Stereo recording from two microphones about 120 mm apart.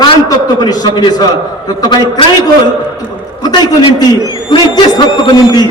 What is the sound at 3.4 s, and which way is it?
A man's voice, 35° left (ahead or behind).